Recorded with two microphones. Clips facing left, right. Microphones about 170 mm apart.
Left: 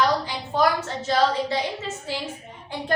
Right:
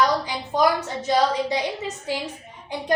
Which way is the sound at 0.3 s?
15° right (ahead or behind).